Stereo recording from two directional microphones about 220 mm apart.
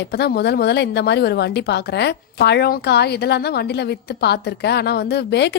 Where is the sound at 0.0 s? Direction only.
50° left (ahead or behind).